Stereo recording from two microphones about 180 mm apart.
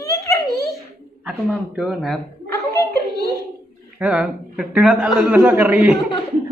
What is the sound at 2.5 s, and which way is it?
Chuckle, 15° left (ahead or behind).